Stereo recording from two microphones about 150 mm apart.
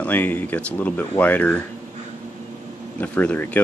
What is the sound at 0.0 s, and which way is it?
Speech, 10° left (ahead or behind).